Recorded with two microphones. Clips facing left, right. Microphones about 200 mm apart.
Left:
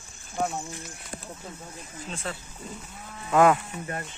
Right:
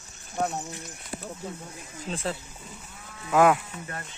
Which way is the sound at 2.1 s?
30° right (ahead or behind).